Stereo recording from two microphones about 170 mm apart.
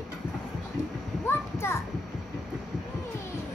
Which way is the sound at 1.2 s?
15° left (ahead or behind).